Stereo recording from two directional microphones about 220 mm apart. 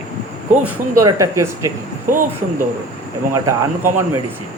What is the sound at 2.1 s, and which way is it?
Speech, 40° right (ahead or behind).